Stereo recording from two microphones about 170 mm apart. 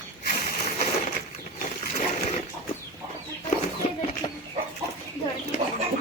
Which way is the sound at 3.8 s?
40° left (ahead or behind).